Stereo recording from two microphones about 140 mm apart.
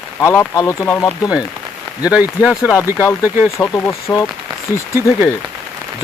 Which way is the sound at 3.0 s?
15° left (ahead or behind).